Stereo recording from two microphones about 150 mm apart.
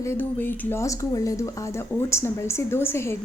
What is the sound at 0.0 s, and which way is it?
Speech, 15° left (ahead or behind).